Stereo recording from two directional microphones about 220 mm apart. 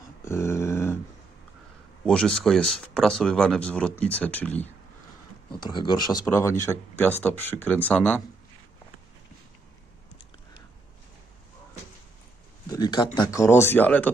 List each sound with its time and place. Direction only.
0.3 s a sound: 10° left (ahead or behind)
2.0 s speech: 5° left (ahead or behind)
5.5 s speech: 20° left (ahead or behind)
12.7 s speech: 15° left (ahead or behind)